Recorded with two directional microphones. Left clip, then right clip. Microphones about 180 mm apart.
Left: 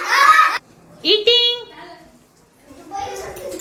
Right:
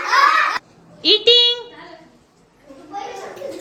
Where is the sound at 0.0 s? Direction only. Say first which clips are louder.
Left 2 dB; centre (ahead or behind).